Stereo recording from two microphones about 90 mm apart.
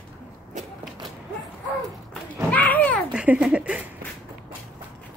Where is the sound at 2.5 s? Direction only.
20° left (ahead or behind).